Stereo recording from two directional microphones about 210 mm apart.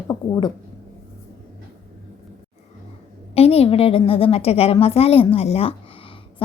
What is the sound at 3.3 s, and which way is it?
A woman's voice, 30° left (ahead or behind).